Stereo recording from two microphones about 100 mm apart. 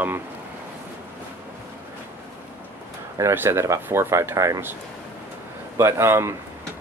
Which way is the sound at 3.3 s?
25° right (ahead or behind).